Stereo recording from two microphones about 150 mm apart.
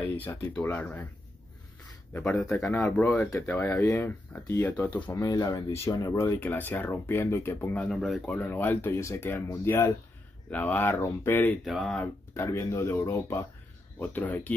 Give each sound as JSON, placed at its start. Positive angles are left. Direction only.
{"t": 0.6, "sound": "speech", "side_deg": 10}
{"t": 2.1, "sound": "speech", "side_deg": 10}
{"t": 3.2, "sound": "speech", "side_deg": 15}
{"t": 5.1, "sound": "speech", "side_deg": 20}
{"t": 11.6, "sound": "speech", "side_deg": 0}
{"t": 12.4, "sound": "speech", "side_deg": 20}